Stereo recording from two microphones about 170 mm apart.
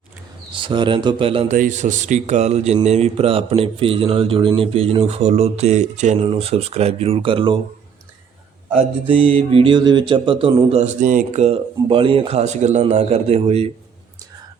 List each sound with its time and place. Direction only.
0.5 s a man's voice: 30° right (ahead or behind)
1.5 s speech: 50° right (ahead or behind); by 7.6 s 30° right (ahead or behind)
8.7 s speech: 35° right (ahead or behind)